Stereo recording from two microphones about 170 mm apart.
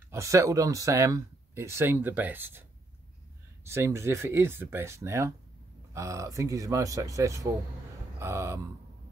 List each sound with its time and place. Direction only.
0.1 s speech: 15° right (ahead or behind)
3.6 s speech: 15° right (ahead or behind)